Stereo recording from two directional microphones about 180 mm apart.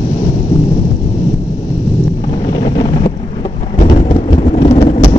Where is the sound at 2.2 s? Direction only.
25° left (ahead or behind).